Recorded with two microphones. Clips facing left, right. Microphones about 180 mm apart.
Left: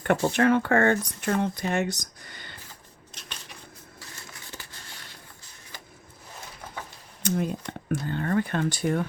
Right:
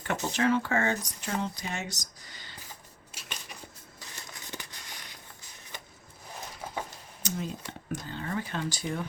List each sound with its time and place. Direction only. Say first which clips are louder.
0.0 s speech: left 6 dB; 55° left (ahead or behind)
3.1 s a sound: left 2 dB; 10° right (ahead or behind)
7.2 s speech: left 8 dB; 55° left (ahead or behind)